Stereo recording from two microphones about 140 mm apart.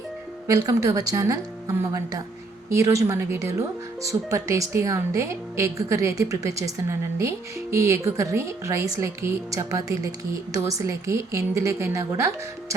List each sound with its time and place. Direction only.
0.4 s speech: 25° right (ahead or behind)